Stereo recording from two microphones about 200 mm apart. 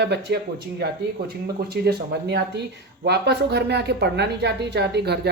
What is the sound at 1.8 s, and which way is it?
Speech, 55° right (ahead or behind).